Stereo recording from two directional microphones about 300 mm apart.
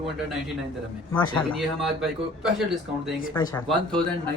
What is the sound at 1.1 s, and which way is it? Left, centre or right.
Speech, centre.